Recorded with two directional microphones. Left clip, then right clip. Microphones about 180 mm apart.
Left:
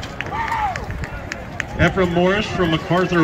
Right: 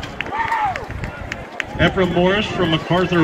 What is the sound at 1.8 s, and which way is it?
Speech, 5° right (ahead or behind).